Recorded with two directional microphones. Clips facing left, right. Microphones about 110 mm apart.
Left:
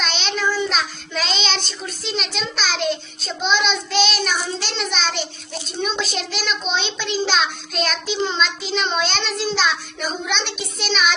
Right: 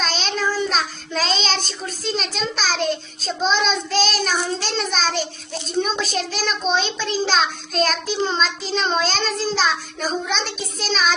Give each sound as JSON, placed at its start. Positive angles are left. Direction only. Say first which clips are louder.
{"t": 0.0, "sound": "child singing", "louder": "even", "side_deg": -35}